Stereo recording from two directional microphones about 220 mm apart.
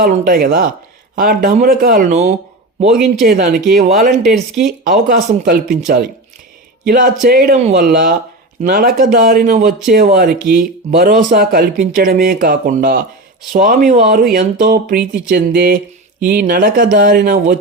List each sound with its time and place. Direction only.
0.0 s speech: 40° right (ahead or behind)
2.9 s speech: centre (ahead or behind)
3.7 s speech: 35° right (ahead or behind)
7.6 s speech: 30° right (ahead or behind)